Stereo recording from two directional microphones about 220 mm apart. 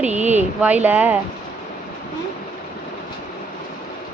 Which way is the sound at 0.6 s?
5° right (ahead or behind).